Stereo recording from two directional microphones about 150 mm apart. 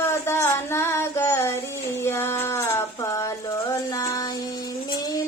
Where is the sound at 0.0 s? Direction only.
15° left (ahead or behind).